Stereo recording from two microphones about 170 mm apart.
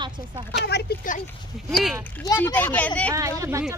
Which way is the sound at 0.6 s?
75° left (ahead or behind).